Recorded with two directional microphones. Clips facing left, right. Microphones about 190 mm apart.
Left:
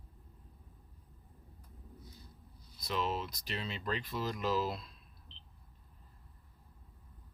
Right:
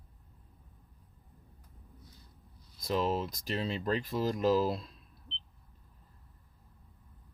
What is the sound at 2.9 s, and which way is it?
Speech, 40° right (ahead or behind).